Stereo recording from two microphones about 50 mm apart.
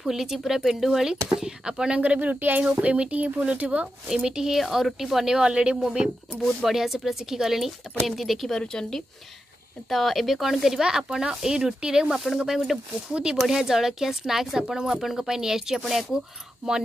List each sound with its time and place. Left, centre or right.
0.0 s speech: centre
2.0 s speech: right
2.6 s speech: right
4.1 s speech: centre
4.6 s speech: centre
8.5 s speech: centre
9.8 s speech: centre
13.1 s speech: centre